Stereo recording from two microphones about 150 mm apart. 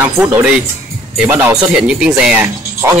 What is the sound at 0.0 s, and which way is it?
Speech, 15° right (ahead or behind).